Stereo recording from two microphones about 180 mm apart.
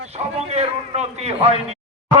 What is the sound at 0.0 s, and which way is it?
A man's voice, 35° right (ahead or behind).